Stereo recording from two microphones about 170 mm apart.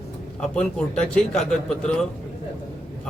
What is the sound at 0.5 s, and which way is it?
A man's voice, 5° left (ahead or behind).